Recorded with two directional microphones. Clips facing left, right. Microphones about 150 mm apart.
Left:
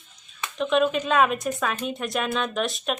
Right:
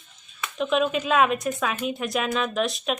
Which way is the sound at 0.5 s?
Centre (ahead or behind).